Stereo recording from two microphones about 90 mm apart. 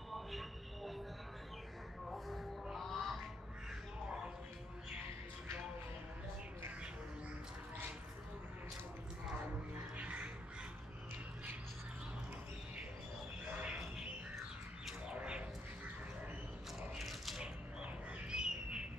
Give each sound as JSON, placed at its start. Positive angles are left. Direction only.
{"t": 0.1, "sound": "train", "side_deg": 0}
{"t": 2.0, "sound": "music", "side_deg": 0}
{"t": 9.9, "sound": "music", "side_deg": -15}
{"t": 13.6, "sound": "squawk", "side_deg": -10}
{"t": 14.9, "sound": "a sound", "side_deg": -10}
{"t": 16.9, "sound": "a sound", "side_deg": 0}